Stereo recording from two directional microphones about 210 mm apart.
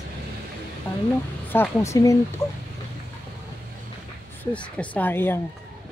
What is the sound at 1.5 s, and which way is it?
Speech, 10° left (ahead or behind).